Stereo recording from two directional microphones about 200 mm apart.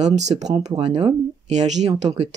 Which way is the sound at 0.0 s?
35° right (ahead or behind).